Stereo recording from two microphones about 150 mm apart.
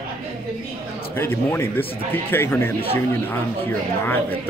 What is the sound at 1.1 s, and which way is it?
Speech, 15° left (ahead or behind).